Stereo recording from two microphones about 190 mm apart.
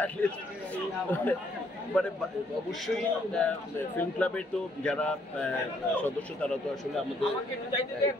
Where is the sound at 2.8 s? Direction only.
5° left (ahead or behind).